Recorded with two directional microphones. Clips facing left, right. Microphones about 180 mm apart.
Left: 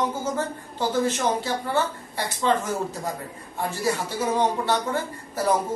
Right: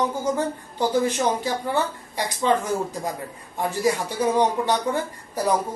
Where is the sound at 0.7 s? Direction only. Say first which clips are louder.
Right 2 dB; 15° right (ahead or behind).